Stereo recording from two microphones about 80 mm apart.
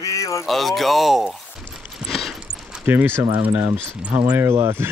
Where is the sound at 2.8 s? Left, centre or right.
Right.